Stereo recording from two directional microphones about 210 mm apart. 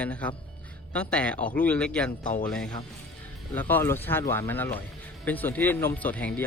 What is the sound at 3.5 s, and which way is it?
Speech, 10° left (ahead or behind).